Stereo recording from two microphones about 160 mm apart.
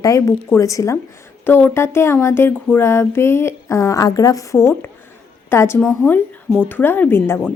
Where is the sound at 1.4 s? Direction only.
15° left (ahead or behind).